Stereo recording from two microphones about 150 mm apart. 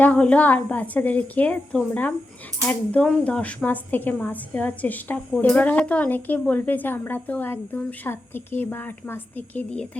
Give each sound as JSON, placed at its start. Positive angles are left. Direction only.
{"t": 0.0, "sound": "speech", "side_deg": 10}